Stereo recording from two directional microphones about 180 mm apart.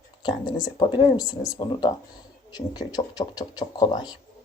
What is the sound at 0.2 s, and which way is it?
Speech, 25° left (ahead or behind).